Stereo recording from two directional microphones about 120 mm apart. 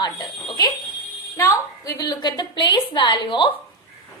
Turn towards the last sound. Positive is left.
turn(degrees=40)  # may be behind; listen again after turning